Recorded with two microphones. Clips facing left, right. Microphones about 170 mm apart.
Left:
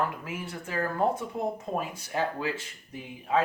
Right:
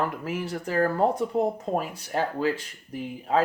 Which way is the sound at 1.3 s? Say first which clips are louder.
Right 6 dB; 80° right.